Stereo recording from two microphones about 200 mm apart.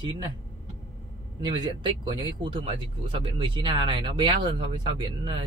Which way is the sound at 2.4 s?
30° right (ahead or behind).